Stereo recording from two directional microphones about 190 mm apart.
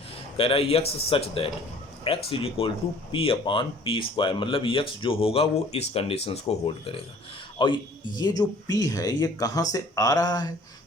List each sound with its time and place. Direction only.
0.3 s speech: 30° left (ahead or behind)